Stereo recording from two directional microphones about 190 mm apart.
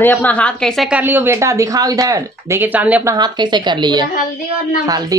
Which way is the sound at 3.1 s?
20° right (ahead or behind).